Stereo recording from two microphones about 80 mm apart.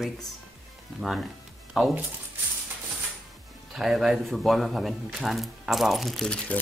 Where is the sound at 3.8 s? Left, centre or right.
Centre.